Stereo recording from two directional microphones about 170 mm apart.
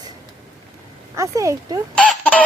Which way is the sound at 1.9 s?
10° left (ahead or behind).